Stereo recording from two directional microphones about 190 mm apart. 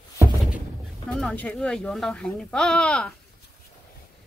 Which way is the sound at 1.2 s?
5° left (ahead or behind).